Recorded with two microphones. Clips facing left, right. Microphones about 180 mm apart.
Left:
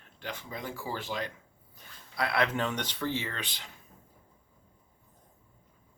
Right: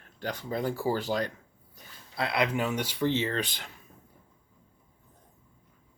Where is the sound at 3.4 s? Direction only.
50° right (ahead or behind).